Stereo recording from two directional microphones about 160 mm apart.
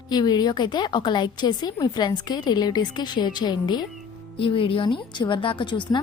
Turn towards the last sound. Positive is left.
turn(degrees=30)  # may be behind; listen again after turning